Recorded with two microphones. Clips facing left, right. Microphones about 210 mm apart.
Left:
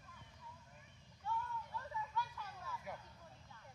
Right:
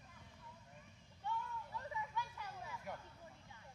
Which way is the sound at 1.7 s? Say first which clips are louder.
Even; 15° right (ahead or behind).